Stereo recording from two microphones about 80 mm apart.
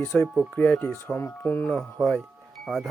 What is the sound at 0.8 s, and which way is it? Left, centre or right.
Speech, left.